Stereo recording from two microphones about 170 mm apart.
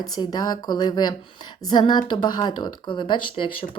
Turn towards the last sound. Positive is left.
turn(degrees=30)  # may be behind; listen again after turning